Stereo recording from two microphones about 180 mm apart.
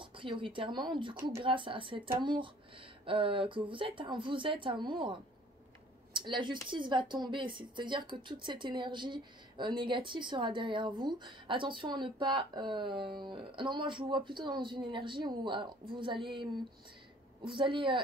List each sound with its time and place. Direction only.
0.0 s a woman's voice: 30° right (ahead or behind)